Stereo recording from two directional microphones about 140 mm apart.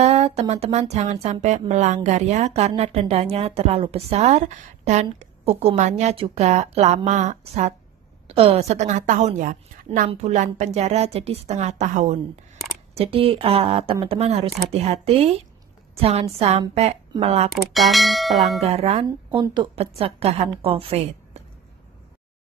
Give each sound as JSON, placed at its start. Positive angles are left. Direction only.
{"t": 0.0, "sound": "a woman's voice", "side_deg": -50}
{"t": 8.3, "sound": "a woman's voice", "side_deg": -45}
{"t": 9.9, "sound": "a woman's voice", "side_deg": -45}
{"t": 12.9, "sound": "a woman's voice", "side_deg": -45}
{"t": 17.7, "sound": "speech", "side_deg": 0}
{"t": 18.6, "sound": "a woman's voice", "side_deg": -45}
{"t": 19.4, "sound": "a woman's voice", "side_deg": -35}
{"t": 20.0, "sound": "a woman's voice", "side_deg": -45}